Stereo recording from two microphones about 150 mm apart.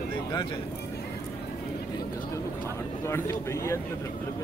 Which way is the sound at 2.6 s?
15° left (ahead or behind).